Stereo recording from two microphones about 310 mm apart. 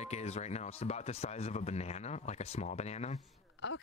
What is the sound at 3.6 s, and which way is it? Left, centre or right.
Speech, left.